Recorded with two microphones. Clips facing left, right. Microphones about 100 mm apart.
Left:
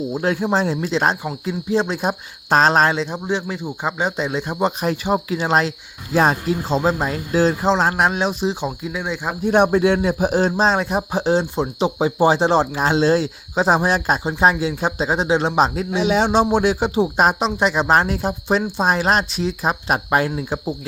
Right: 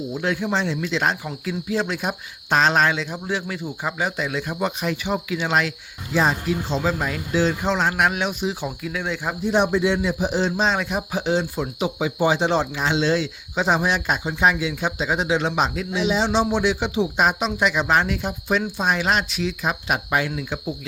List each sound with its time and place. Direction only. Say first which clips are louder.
0.1 s speech: left 3 dB; 40° left (ahead or behind)
8.6 s speech: left 2 dB; 20° left (ahead or behind)
9.4 s speech: left 5 dB; 55° left (ahead or behind); by 15.9 s 35° left (ahead or behind)
16.0 s speech: left 4 dB; 55° left (ahead or behind); by 20.7 s 35° left (ahead or behind)